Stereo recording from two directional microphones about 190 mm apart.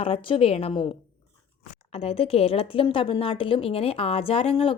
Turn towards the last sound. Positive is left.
turn(degrees=30)  # may be behind; listen again after turning